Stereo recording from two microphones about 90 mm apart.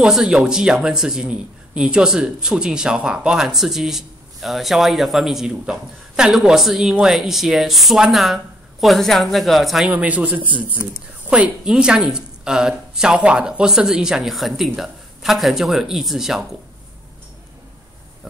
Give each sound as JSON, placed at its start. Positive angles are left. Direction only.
{"t": 0.0, "sound": "a man's voice", "side_deg": -5}
{"t": 9.8, "sound": "a woman's voice", "side_deg": -15}